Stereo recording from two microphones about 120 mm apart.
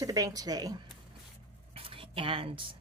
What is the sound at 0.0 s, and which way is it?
Speech, 30° right (ahead or behind).